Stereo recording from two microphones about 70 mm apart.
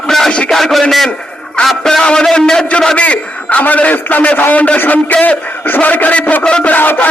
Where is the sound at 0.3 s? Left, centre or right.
Centre.